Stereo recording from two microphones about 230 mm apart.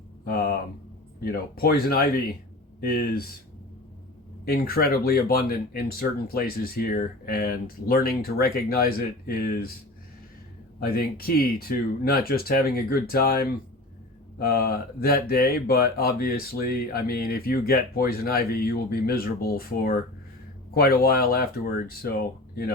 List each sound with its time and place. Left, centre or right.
0.3 s speech: left
4.4 s speech: left
10.8 s speech: left